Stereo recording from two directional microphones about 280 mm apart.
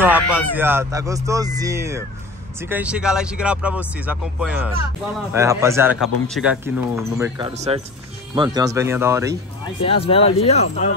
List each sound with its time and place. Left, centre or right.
0.0 s speech: centre
9.8 s speech: centre